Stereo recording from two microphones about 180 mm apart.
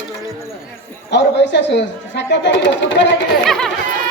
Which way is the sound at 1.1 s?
80° left.